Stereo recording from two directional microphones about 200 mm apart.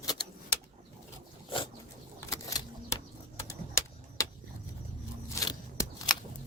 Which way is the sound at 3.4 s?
15° left (ahead or behind).